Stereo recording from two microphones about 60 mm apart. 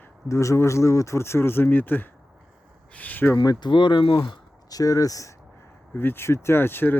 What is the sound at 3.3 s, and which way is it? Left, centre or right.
Speech, left.